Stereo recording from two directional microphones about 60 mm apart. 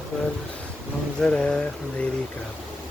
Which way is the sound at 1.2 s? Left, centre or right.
Centre.